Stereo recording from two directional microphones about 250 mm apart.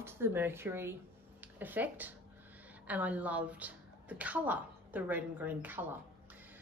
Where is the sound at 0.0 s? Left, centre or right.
Centre.